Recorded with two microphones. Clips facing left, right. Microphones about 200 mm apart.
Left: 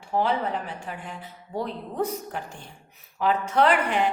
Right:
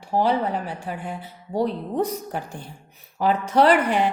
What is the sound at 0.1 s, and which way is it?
Speech, 35° right (ahead or behind).